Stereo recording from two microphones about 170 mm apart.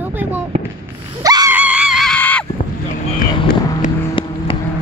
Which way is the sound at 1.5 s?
10° right (ahead or behind).